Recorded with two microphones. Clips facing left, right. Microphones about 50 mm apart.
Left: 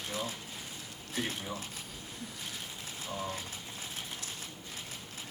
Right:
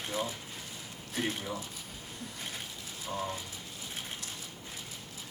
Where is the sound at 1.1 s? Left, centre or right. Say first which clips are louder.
Right 2 dB; centre.